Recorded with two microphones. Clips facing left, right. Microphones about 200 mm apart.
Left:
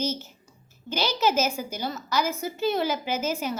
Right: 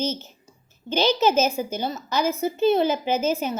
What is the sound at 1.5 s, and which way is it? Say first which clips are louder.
A woman's voice: right 4 dB; 20° right (ahead or behind).